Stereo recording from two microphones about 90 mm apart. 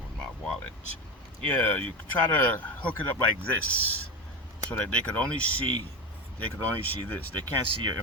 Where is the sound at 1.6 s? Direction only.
15° left (ahead or behind).